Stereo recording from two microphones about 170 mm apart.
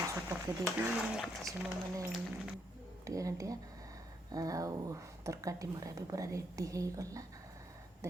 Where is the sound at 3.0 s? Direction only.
20° right (ahead or behind).